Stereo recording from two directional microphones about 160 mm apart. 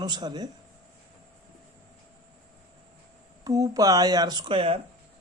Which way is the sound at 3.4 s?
20° right (ahead or behind).